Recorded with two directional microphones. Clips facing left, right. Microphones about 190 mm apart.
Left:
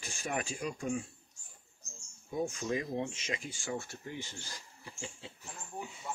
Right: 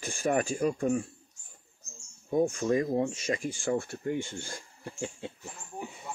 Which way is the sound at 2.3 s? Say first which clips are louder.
Right 8 dB; 50° right (ahead or behind).